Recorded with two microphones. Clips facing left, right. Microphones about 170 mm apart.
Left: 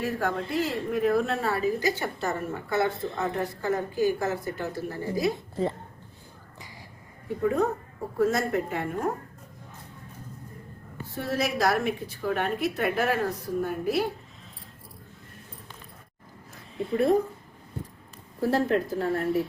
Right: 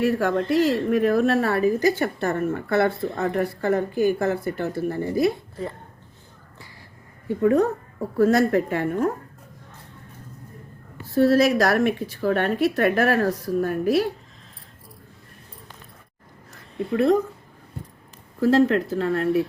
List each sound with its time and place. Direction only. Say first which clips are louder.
0.0 s a woman's voice: right 7 dB; 90° right; by 5.3 s 60° right (ahead or behind)
7.4 s a woman's voice: right 6 dB; 65° right (ahead or behind)
11.1 s a woman's voice: right 12 dB; 85° right
16.5 s a sound: right 3 dB; 85° right
18.4 s speech: right 6 dB; 90° right; by 19.4 s 75° right (ahead or behind)